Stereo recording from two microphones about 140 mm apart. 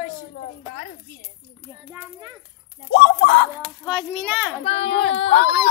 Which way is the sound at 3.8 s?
10° right (ahead or behind).